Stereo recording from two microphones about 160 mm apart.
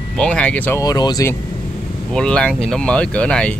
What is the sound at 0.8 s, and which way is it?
Speech, 25° left (ahead or behind).